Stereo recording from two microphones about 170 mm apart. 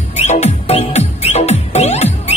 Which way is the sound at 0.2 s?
40° left (ahead or behind).